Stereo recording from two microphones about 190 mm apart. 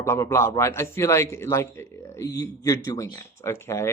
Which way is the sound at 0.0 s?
15° left (ahead or behind).